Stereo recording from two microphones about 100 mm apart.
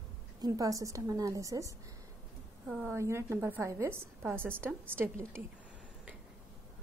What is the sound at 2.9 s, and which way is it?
A woman's voice, 25° right (ahead or behind).